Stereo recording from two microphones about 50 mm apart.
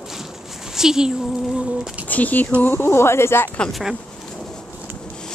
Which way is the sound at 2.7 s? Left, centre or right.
Left.